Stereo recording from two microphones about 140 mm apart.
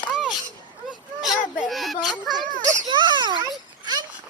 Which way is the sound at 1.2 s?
Centre (ahead or behind).